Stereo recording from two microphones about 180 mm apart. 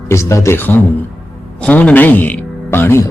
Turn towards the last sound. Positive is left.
turn(degrees=15)  # may be behind; listen again after turning